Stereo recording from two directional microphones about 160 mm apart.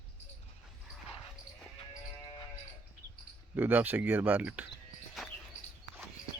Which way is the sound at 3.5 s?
10° right (ahead or behind).